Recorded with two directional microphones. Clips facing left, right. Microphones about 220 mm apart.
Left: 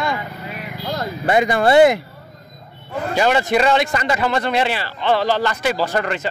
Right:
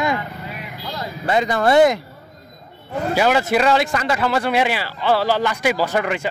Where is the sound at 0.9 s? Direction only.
55° left (ahead or behind).